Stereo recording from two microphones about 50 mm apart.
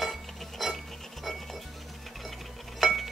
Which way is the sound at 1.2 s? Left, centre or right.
Centre.